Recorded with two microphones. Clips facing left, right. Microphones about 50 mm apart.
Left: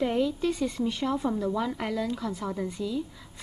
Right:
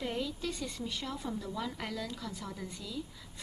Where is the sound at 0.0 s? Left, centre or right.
Left.